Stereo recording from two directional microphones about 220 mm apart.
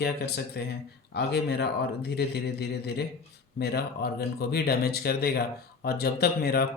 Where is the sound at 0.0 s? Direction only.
45° left (ahead or behind).